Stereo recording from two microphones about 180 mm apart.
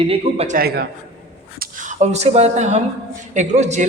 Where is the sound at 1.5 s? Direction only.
45° right (ahead or behind).